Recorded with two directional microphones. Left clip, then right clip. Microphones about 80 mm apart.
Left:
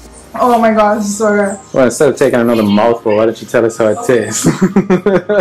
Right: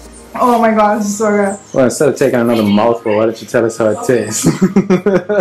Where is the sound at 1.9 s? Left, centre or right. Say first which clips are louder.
Left 2 dB; centre.